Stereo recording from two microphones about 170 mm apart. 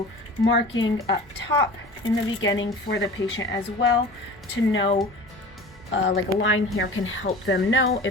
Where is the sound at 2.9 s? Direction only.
90° left.